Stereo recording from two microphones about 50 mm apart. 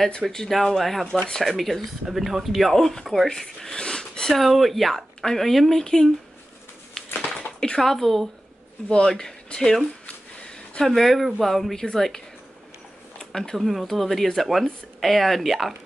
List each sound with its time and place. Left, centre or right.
0.1 s speech: centre
4.4 s speech: centre
7.3 s a sound: centre
7.8 s speech: centre
8.8 s speech: centre
10.0 s a sound: centre
11.0 s speech: centre
13.4 s speech: centre